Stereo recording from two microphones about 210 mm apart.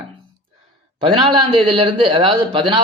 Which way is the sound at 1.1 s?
25° right (ahead or behind).